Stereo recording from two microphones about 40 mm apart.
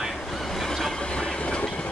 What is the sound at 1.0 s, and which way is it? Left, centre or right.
Train, left.